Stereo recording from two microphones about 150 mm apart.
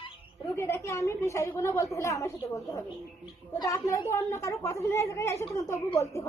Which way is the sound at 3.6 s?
20° left (ahead or behind).